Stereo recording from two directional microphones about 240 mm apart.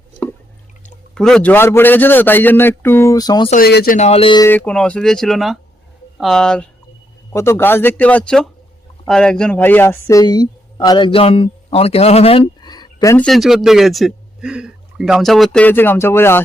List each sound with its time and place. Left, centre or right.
1.1 s a man's voice: centre
3.5 s speech: left
3.9 s speech: left
4.4 s a man's voice: centre
13.2 s a man's voice: centre